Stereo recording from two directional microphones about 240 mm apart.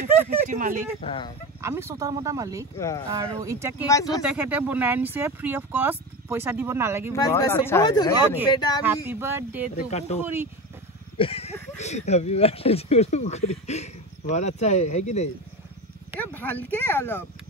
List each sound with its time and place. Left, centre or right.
0.5 s speech: right
1.0 s speech: left
1.6 s speech: centre
3.8 s speech: centre
4.2 s speech: centre
7.1 s speech: centre
8.8 s speech: centre
9.8 s speech: left
10.2 s speech: centre
11.1 s a sound: left
11.7 s speech: left
16.2 s speech: centre